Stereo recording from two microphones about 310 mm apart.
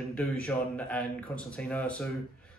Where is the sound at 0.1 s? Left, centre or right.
Centre.